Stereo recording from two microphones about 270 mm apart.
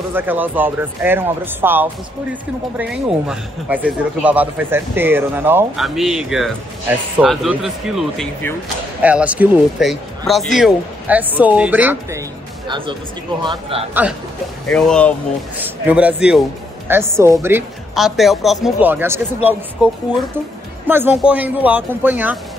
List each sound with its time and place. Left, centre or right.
0.1 s a man's voice: centre
12.6 s speech: centre
14.7 s a man's voice: centre